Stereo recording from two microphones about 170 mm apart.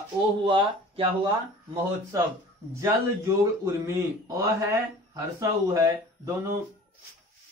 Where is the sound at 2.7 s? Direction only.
15° right (ahead or behind).